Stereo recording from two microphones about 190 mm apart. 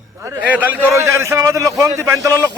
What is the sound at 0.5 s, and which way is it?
A man's voice, 10° right (ahead or behind).